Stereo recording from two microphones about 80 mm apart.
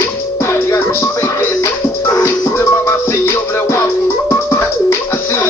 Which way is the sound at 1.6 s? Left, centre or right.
Left.